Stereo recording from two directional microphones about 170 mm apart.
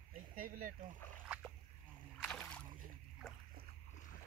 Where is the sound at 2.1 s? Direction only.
5° left (ahead or behind).